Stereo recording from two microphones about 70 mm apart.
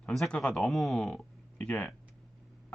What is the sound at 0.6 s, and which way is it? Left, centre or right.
Speech, centre.